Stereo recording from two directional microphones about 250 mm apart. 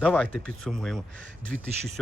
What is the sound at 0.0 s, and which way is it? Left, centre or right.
Speech, centre.